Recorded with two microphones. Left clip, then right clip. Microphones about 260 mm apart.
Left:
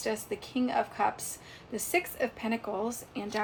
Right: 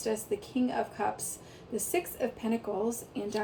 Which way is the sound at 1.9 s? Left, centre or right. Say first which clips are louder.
Left 3 dB; centre.